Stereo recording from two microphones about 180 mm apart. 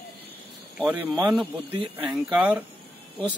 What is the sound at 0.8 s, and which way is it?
Speech, 5° right (ahead or behind).